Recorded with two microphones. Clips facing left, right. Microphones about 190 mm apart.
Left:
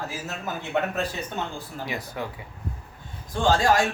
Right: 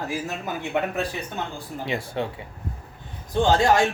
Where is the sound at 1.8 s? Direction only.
25° right (ahead or behind).